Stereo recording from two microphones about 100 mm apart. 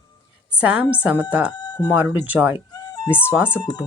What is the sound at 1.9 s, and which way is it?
Speech, 20° right (ahead or behind).